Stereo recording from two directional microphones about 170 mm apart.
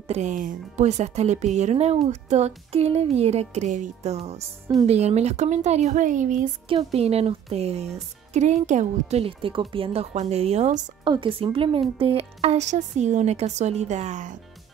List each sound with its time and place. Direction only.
0.1 s speech: 45° right (ahead or behind)
6.7 s speech: 35° right (ahead or behind)
9.1 s speech: 35° right (ahead or behind)
11.1 s speech: 30° right (ahead or behind)